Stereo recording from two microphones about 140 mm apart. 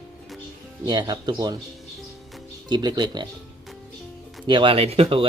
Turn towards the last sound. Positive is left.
turn(degrees=-40)  # may be behind; listen again after turning